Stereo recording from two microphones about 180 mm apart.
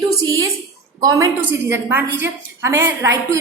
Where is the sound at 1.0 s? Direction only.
20° right (ahead or behind).